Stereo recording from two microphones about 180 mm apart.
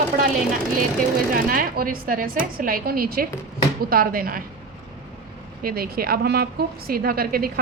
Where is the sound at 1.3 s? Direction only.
50° right (ahead or behind).